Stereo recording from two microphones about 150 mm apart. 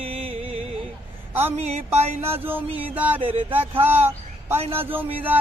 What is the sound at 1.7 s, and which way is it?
Music, 45° right (ahead or behind).